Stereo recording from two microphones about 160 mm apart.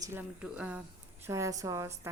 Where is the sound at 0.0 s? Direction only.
15° right (ahead or behind).